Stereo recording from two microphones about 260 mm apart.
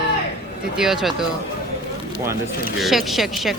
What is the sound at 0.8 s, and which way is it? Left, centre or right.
Speech, centre.